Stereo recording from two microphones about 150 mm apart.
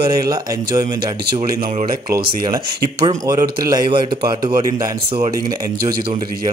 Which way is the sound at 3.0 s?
30° right (ahead or behind).